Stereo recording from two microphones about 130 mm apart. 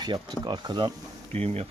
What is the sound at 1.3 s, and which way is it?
Speech, 50° right (ahead or behind).